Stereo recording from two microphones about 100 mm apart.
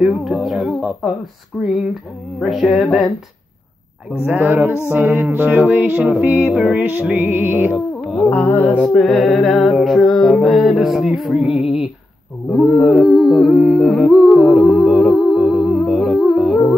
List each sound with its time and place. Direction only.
0.0 s speech: centre (ahead or behind)
1.5 s a sound: 10° left (ahead or behind)
2.4 s music: centre (ahead or behind)
4.3 s music: 15° right (ahead or behind)
6.5 s music: 5° right (ahead or behind)
6.8 s music: 15° right (ahead or behind)
7.7 s music: centre (ahead or behind)
8.3 s music: 15° left (ahead or behind); by 11.9 s 5° right (ahead or behind)
12.5 s humming: centre (ahead or behind)
15.8 s music: centre (ahead or behind)